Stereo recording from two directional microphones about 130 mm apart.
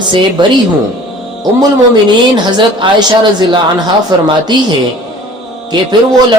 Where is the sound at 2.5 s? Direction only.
35° right (ahead or behind).